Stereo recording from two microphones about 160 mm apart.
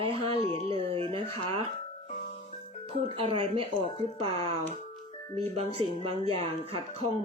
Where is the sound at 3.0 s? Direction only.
35° right (ahead or behind).